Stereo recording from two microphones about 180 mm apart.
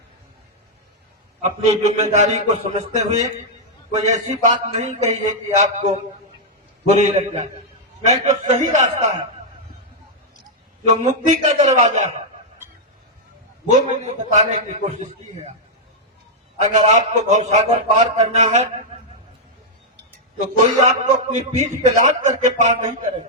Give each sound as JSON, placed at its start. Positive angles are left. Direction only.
{"t": 1.6, "sound": "a man's voice", "side_deg": -40}
{"t": 10.8, "sound": "a man's voice", "side_deg": -40}
{"t": 13.7, "sound": "a man's voice", "side_deg": -40}
{"t": 16.6, "sound": "a man's voice", "side_deg": -40}
{"t": 21.0, "sound": "a man's voice", "side_deg": -40}